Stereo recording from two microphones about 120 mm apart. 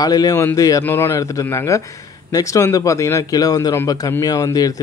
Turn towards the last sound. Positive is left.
turn(degrees=30)  # may be behind; listen again after turning